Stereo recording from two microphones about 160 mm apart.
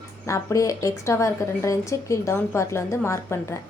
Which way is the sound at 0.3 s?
20° left (ahead or behind).